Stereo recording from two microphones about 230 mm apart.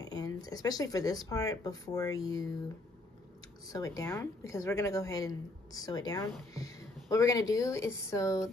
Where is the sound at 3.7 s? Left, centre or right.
Centre.